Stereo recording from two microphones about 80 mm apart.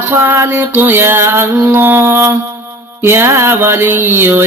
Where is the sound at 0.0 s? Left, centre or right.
Right.